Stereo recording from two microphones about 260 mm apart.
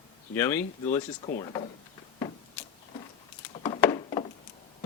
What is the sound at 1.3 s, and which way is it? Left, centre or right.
Speech, left.